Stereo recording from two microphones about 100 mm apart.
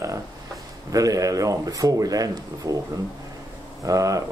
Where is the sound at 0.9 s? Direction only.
35° right (ahead or behind).